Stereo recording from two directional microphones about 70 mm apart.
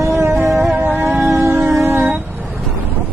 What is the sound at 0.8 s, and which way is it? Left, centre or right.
Music, right.